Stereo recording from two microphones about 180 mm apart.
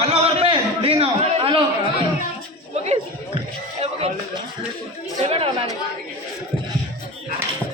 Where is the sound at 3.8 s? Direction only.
35° right (ahead or behind).